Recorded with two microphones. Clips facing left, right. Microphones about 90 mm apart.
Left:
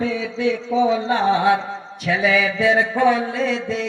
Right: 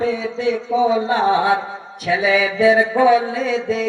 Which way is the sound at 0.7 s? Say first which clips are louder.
Right 2 dB; 25° right (ahead or behind).